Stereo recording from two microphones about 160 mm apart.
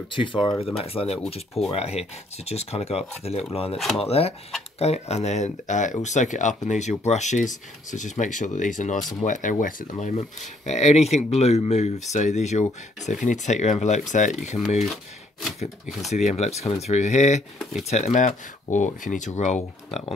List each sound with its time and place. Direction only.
0.1 s speech: 30° left (ahead or behind)
3.7 s speech: centre (ahead or behind)
4.0 s speech: 40° left (ahead or behind)
16.1 s speech: 45° left (ahead or behind)